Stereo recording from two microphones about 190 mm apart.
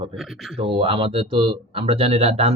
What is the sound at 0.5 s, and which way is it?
Speech, 30° right (ahead or behind).